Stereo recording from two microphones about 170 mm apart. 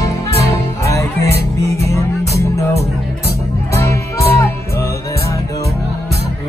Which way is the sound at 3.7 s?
15° left (ahead or behind).